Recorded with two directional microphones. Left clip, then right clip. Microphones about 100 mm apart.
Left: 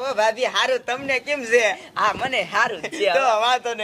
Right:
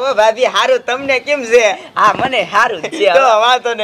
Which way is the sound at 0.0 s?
30° left (ahead or behind).